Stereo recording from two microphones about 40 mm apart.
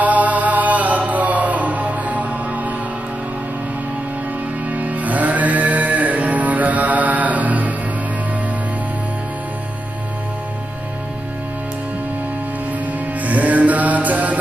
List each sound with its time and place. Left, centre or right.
0.0 s music: right
4.6 s music: right
13.2 s music: right